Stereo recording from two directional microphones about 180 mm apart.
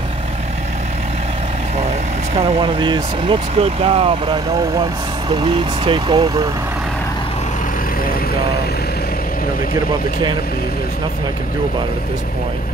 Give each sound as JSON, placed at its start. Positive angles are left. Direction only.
{"t": 2.3, "sound": "speech", "side_deg": -30}